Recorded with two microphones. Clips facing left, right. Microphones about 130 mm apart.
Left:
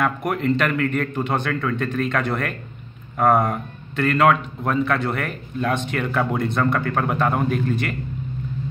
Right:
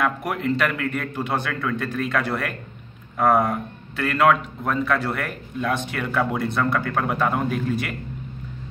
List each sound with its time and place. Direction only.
0.0 s a man's voice: 5° right (ahead or behind)